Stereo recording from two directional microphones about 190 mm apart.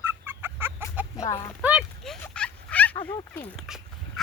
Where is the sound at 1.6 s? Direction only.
Centre (ahead or behind).